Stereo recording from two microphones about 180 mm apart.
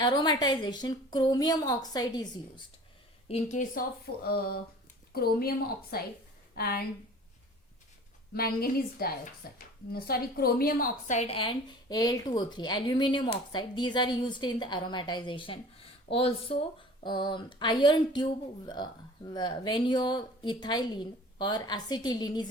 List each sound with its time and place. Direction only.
0.0 s speech: 25° left (ahead or behind)
3.2 s speech: 40° left (ahead or behind); by 6.8 s 55° left (ahead or behind)
8.3 s speech: 55° left (ahead or behind); by 22.4 s 20° left (ahead or behind)